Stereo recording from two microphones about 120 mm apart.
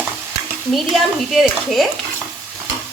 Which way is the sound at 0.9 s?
Centre (ahead or behind).